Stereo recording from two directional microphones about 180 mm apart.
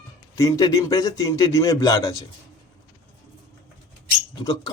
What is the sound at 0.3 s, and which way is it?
A man's voice, 20° left (ahead or behind).